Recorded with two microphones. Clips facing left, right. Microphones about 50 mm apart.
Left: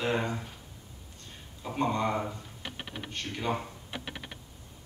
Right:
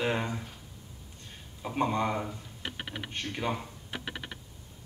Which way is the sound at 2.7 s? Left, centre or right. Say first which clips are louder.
Right 1 dB; right.